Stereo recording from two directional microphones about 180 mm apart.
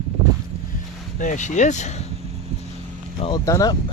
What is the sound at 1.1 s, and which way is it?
Speech, 45° left (ahead or behind).